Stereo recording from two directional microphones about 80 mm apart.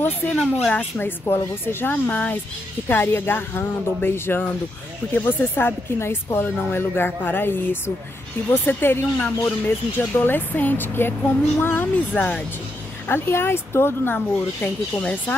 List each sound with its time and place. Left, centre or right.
0.2 s speech: left
14.1 s speech: centre